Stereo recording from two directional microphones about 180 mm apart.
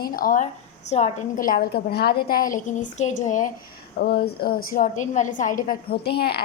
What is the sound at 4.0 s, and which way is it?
A woman's voice, 60° left (ahead or behind).